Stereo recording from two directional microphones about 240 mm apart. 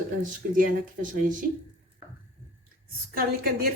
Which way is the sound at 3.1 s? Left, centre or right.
Right.